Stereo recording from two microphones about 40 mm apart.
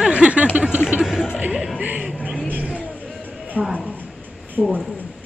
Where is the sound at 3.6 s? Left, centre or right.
Right.